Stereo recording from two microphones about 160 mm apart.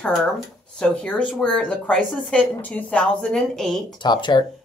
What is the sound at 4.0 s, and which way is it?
Speech, 30° left (ahead or behind).